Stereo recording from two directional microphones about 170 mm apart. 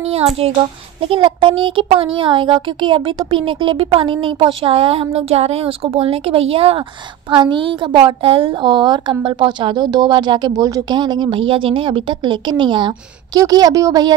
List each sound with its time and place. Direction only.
1.0 s a woman's voice: 30° right (ahead or behind)